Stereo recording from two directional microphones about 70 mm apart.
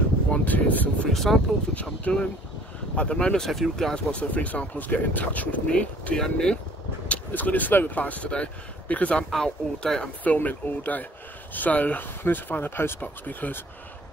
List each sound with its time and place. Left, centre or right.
0.3 s a sound: left
1.1 s speech: centre
1.8 s speech: centre
3.4 s speech: centre
4.1 s speech: centre
7.1 s speech: left
9.3 s speech: centre
10.2 s speech: left